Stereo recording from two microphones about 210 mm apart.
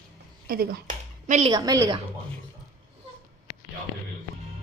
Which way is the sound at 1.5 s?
20° right (ahead or behind).